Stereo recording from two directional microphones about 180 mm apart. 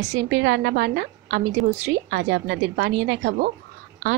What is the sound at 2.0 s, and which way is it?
A woman's voice, 80° right.